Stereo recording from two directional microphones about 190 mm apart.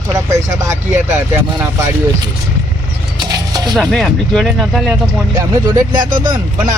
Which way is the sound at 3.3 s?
20° right (ahead or behind).